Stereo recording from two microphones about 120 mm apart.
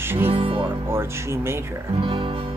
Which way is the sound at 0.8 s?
20° right (ahead or behind).